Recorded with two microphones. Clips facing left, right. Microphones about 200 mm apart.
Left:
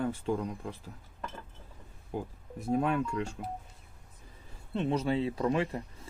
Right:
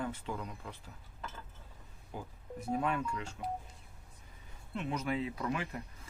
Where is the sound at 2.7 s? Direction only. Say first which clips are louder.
Left 5 dB; 40° left (ahead or behind).